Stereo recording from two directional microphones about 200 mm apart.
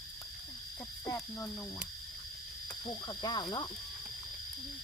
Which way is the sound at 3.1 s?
20° left (ahead or behind).